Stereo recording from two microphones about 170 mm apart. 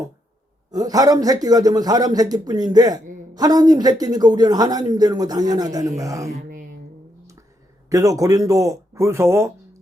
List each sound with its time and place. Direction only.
0.7 s a man's voice: 20° right (ahead or behind)
6.3 s a sound: 55° right (ahead or behind)
7.9 s a man's voice: 20° right (ahead or behind)